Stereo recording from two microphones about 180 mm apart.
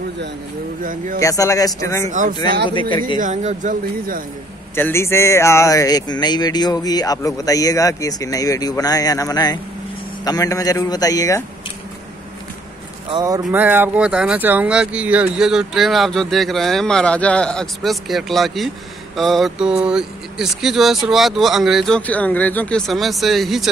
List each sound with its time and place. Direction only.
0.8 s speech: 50° right (ahead or behind)
1.2 s speech: 15° left (ahead or behind)
2.0 s speech: 45° right (ahead or behind)
2.7 s speech: 25° left (ahead or behind)
3.2 s speech: 45° right (ahead or behind)
4.7 s speech: 15° left (ahead or behind)
13.1 s a man's voice: 20° right (ahead or behind)
13.4 s speech: 10° right (ahead or behind)